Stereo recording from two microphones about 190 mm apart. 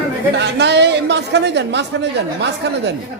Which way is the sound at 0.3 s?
65° right (ahead or behind).